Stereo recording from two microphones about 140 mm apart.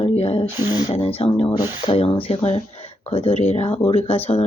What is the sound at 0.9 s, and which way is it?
Speech, 45° left (ahead or behind).